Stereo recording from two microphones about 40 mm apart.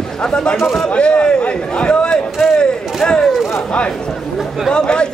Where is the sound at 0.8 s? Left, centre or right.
Left.